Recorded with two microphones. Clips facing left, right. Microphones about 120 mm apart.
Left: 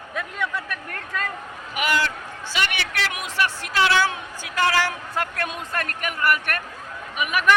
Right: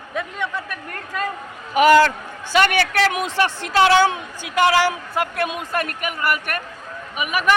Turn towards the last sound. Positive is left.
turn(degrees=-5)  # may be behind; listen again after turning